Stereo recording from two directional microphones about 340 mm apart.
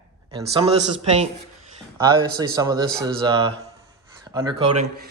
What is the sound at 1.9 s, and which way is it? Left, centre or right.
A man's voice, centre.